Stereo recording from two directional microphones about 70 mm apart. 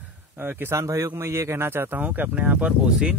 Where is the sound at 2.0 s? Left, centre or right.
Right.